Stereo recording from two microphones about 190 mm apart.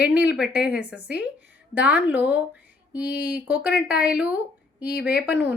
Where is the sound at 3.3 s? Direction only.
10° right (ahead or behind).